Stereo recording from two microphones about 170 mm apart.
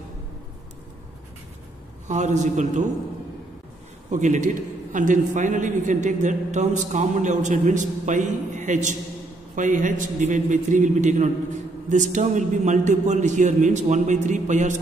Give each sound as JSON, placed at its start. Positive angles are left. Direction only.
{"t": 2.0, "sound": "a man's voice", "side_deg": -45}
{"t": 4.1, "sound": "a man's voice", "side_deg": -45}